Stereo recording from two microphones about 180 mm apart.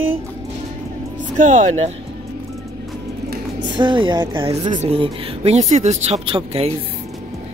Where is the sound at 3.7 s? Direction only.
25° right (ahead or behind).